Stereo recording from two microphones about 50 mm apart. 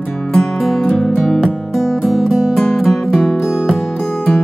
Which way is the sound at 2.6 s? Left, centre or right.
Centre.